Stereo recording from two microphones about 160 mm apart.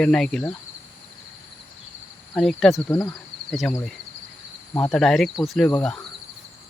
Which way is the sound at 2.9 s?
25° left (ahead or behind).